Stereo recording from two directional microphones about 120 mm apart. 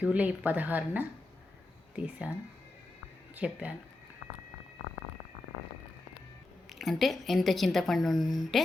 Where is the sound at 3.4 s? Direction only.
10° right (ahead or behind).